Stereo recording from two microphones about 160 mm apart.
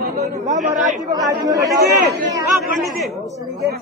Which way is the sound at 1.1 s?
20° right (ahead or behind).